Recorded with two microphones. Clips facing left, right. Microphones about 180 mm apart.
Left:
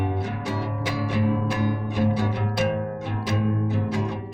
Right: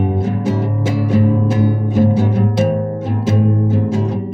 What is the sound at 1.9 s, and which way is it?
Music, 45° right (ahead or behind).